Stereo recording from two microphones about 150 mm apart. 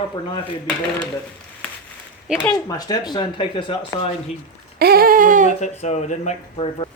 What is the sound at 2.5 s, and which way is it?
Speech, 25° left (ahead or behind).